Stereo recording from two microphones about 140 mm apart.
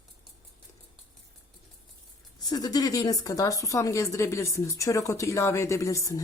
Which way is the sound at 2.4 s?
30° left (ahead or behind).